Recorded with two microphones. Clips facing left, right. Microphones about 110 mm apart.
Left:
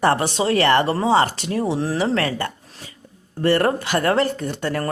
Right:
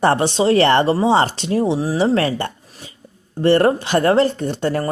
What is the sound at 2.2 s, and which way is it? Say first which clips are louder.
A woman's voice: right 3 dB; 30° right (ahead or behind).